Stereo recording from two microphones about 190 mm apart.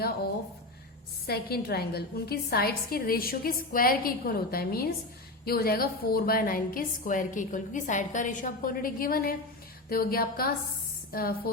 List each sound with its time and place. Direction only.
1.3 s a woman's voice: 55° left (ahead or behind)